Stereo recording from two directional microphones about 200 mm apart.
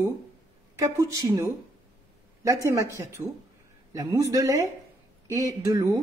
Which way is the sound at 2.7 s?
15° right (ahead or behind).